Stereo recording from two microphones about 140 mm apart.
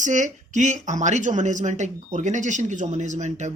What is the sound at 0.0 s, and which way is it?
Speech, 65° right (ahead or behind).